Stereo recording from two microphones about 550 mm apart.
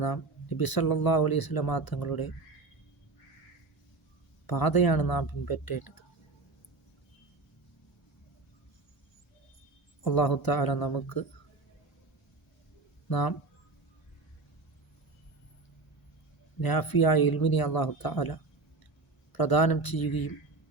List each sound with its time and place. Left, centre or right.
0.0 s speech: left
4.4 s speech: left
10.0 s speech: left
13.1 s speech: left
16.6 s speech: left